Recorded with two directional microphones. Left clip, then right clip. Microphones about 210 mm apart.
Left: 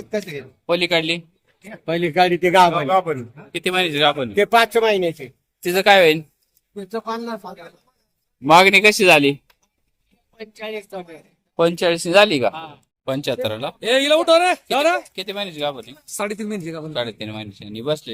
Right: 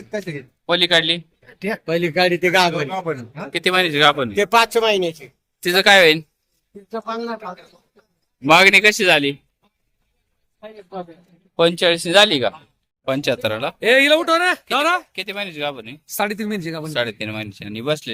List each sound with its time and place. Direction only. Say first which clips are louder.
0.7 s speech: right 3 dB; 10° left (ahead or behind)
1.8 s speech: left 1 dB; 35° left (ahead or behind)
2.9 s a man's voice: left 6 dB; 55° left (ahead or behind)
3.5 s speech: right 3 dB; centre (ahead or behind)
4.4 s speech: even; 30° left (ahead or behind)
5.6 s speech: right 1 dB; 10° left (ahead or behind)
6.8 s speech: even; 55° left (ahead or behind)
8.4 s speech: even; 10° left (ahead or behind)
11.5 s speech: right 2 dB; 10° left (ahead or behind)
13.1 s speech: right 2 dB; centre (ahead or behind)
13.7 s speech: right 2 dB; 30° right (ahead or behind)
15.1 s speech: right 1 dB; 5° right (ahead or behind)
16.0 s speech: right 3 dB; 45° right (ahead or behind)
16.9 s speech: right 4 dB; 5° right (ahead or behind)